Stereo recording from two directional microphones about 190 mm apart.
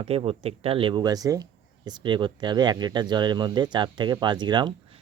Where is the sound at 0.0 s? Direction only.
30° right (ahead or behind).